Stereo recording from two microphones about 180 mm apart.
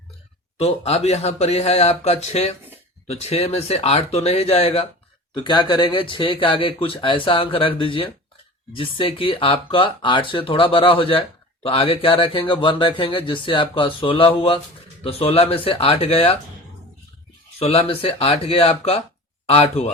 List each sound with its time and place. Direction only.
0.6 s speech: 35° left (ahead or behind)
17.6 s speech: 30° left (ahead or behind)